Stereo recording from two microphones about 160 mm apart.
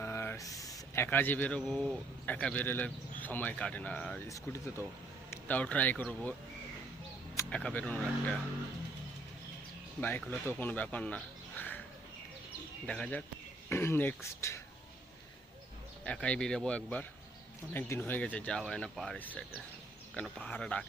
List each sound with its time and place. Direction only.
0.0 s speech: 15° left (ahead or behind)
4.3 s speech: 20° left (ahead or behind)
7.5 s speech: 10° left (ahead or behind)
10.0 s speech: 10° left (ahead or behind)
12.8 s speech: 5° left (ahead or behind)
16.0 s speech: 5° left (ahead or behind)